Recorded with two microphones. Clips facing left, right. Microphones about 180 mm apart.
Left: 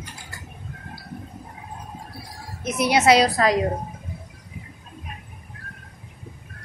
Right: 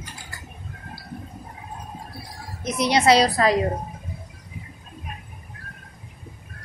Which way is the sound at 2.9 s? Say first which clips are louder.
Even; 5° left (ahead or behind).